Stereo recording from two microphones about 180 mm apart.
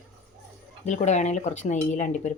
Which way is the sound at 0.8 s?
40° left (ahead or behind).